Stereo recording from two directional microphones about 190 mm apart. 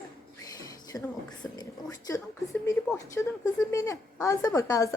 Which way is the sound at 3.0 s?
15° left (ahead or behind).